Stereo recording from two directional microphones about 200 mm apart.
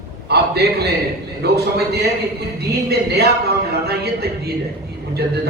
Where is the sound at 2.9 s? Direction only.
55° right (ahead or behind).